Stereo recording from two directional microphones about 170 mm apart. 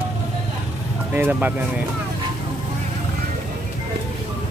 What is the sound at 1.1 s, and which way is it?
Speech, 10° right (ahead or behind).